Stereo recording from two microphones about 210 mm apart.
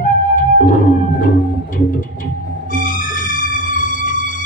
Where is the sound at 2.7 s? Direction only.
40° left (ahead or behind).